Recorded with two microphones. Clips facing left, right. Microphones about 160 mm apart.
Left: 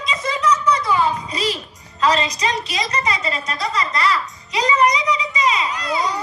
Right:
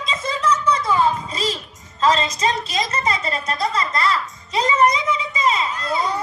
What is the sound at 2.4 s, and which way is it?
Speech, 35° right (ahead or behind).